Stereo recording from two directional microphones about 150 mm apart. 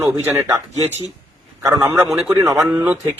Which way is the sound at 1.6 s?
20° right (ahead or behind).